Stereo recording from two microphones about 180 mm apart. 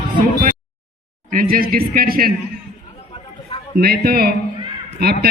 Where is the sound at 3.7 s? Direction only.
55° right (ahead or behind).